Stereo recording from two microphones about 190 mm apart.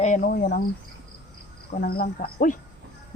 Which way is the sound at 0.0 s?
45° left (ahead or behind).